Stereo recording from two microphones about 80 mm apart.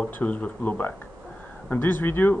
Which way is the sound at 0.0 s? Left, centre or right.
Centre.